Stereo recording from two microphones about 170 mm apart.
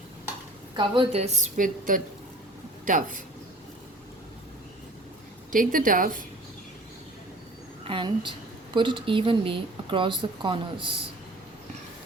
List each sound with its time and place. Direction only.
0.8 s a woman's voice: 35° right (ahead or behind); by 3.2 s 50° right (ahead or behind)
5.5 s a woman's voice: 55° right (ahead or behind)
7.9 s speech: 30° right (ahead or behind)